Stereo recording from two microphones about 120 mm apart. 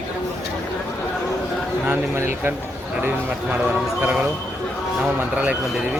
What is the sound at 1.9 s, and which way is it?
Speech, 20° right (ahead or behind).